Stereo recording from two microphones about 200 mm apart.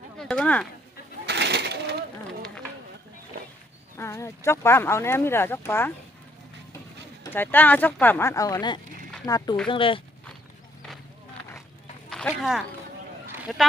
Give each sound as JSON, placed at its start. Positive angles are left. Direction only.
{"t": 0.2, "sound": "speech", "side_deg": 5}
{"t": 1.3, "sound": "sewing machine", "side_deg": -55}
{"t": 3.9, "sound": "speech", "side_deg": 15}
{"t": 7.3, "sound": "speech", "side_deg": 10}
{"t": 12.1, "sound": "speech", "side_deg": 0}